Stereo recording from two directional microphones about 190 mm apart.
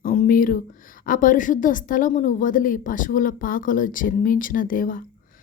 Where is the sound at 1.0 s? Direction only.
45° left (ahead or behind).